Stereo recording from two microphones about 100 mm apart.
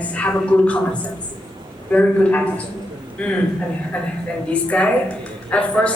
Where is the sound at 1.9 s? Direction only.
15° left (ahead or behind).